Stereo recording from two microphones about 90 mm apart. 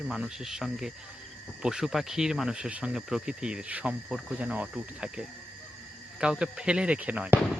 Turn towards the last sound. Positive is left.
turn(degrees=-15)  # may be behind; listen again after turning